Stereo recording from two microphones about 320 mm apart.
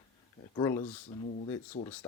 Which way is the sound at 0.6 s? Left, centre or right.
Centre.